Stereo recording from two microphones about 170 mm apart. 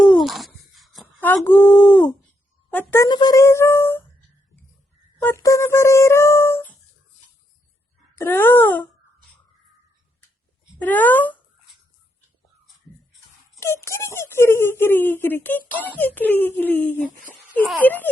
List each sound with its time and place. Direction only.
0.0 s a sound: centre (ahead or behind)
1.4 s a woman's voice: 10° left (ahead or behind)
3.1 s speech: 25° left (ahead or behind)
5.2 s speech: 15° left (ahead or behind)
8.1 s speech: 15° left (ahead or behind)
10.8 s speech: 10° left (ahead or behind)
13.8 s speech: 15° left (ahead or behind)